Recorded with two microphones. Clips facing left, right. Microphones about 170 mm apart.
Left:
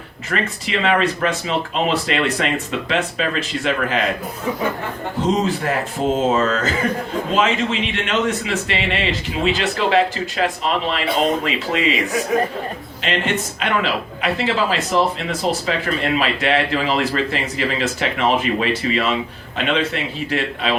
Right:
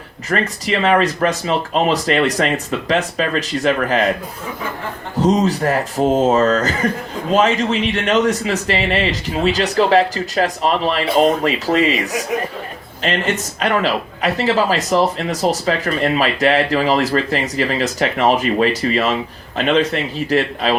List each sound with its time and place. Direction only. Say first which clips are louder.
0.3 s speech: right 4 dB; 40° right (ahead or behind)
5.2 s speech: right 4 dB; 40° right (ahead or behind)
13.0 s speech: right 2 dB; 40° right (ahead or behind)